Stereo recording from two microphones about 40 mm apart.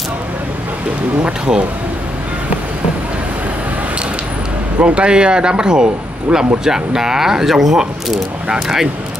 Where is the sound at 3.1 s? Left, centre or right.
Right.